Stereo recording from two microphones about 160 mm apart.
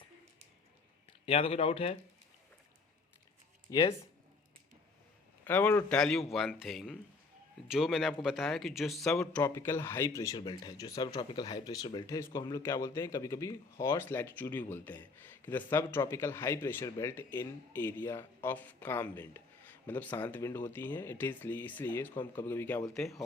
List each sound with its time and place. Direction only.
1.2 s speech: 35° left (ahead or behind)
3.7 s speech: 20° left (ahead or behind)
5.5 s speech: 10° left (ahead or behind)
9.3 s speech: 15° left (ahead or behind)
22.9 s speech: centre (ahead or behind)